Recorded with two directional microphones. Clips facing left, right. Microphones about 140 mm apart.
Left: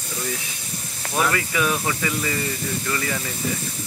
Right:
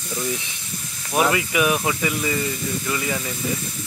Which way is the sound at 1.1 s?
15° right (ahead or behind).